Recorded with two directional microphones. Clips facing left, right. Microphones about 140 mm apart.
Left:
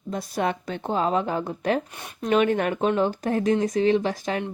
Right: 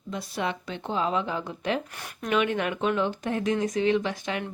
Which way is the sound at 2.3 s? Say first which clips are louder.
Left 5 dB; 40° left (ahead or behind).